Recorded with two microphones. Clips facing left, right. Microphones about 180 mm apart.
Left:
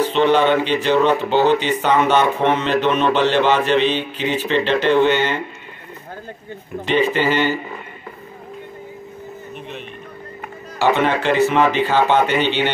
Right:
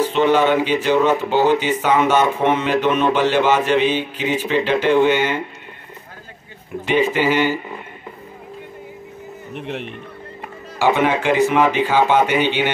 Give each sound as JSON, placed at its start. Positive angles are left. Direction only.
{"t": 0.0, "sound": "speech", "side_deg": -10}
{"t": 6.9, "sound": "speech", "side_deg": -10}
{"t": 9.5, "sound": "a man's voice", "side_deg": -80}
{"t": 10.8, "sound": "speech", "side_deg": -10}